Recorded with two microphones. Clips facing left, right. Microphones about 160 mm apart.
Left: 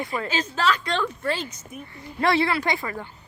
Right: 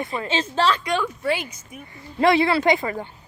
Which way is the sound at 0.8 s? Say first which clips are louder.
Right 2 dB; 10° right (ahead or behind).